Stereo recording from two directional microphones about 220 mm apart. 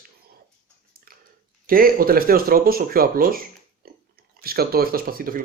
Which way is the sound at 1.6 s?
40° right (ahead or behind).